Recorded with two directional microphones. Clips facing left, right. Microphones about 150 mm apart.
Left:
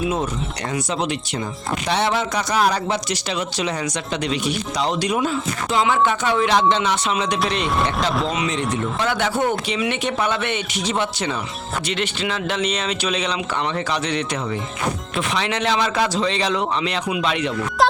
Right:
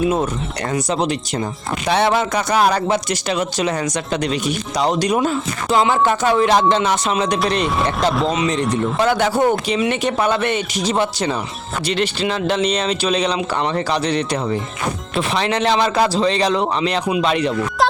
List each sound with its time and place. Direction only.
0.7 s a man's voice: 40° right (ahead or behind)
1.9 s speech: 55° right (ahead or behind)
7.4 s speech: centre (ahead or behind)
8.7 s a man's voice: 40° right (ahead or behind)